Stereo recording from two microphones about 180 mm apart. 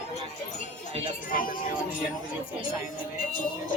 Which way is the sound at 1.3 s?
50° left (ahead or behind).